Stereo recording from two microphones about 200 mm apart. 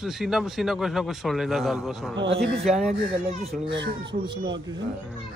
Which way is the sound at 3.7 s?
60° right (ahead or behind).